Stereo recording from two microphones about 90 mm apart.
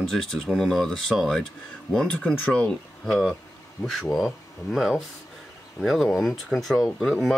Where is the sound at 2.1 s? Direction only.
20° left (ahead or behind).